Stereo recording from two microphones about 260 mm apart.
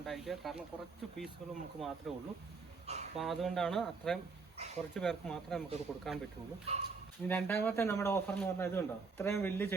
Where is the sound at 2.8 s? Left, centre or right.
Right.